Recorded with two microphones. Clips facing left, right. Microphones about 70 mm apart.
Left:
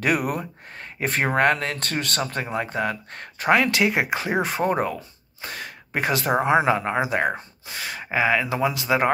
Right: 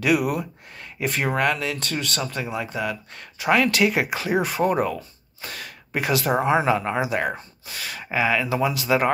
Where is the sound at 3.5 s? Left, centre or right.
Left.